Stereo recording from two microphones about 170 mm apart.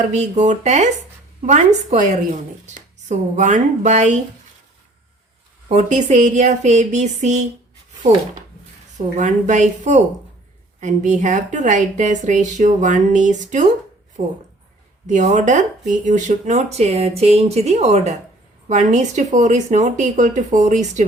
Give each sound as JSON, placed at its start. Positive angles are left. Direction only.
{"t": 0.1, "sound": "speech", "side_deg": -45}
{"t": 3.1, "sound": "speech", "side_deg": -45}
{"t": 5.6, "sound": "speech", "side_deg": -40}
{"t": 9.1, "sound": "speech", "side_deg": -45}